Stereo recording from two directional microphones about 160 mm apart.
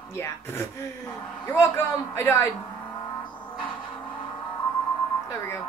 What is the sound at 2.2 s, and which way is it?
Speech, 15° left (ahead or behind).